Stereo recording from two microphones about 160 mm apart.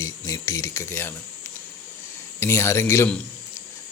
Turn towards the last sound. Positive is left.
turn(degrees=15)  # may be behind; listen again after turning